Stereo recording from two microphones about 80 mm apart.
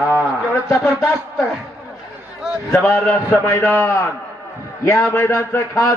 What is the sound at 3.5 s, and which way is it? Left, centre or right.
Speech, left.